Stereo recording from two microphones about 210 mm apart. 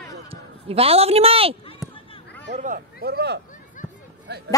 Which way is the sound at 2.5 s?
40° right (ahead or behind).